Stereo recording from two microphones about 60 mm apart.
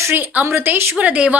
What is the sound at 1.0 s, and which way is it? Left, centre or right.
Speech, right.